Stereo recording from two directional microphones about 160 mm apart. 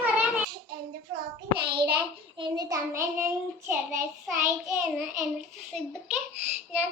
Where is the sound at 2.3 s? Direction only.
30° right (ahead or behind).